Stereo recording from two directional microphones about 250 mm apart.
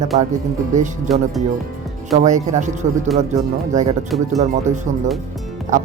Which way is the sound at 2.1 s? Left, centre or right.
Right.